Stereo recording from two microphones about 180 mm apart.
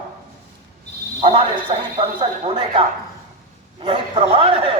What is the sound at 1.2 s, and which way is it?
A man's voice, 30° right (ahead or behind).